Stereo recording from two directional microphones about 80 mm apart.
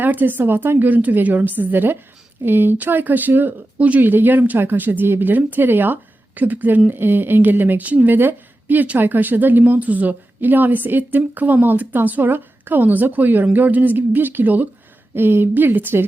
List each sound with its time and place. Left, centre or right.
0.0 s speech: right